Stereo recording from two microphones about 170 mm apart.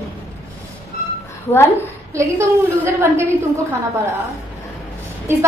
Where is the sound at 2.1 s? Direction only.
15° right (ahead or behind).